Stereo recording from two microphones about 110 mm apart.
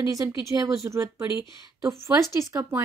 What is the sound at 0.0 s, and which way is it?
Speech, 30° right (ahead or behind).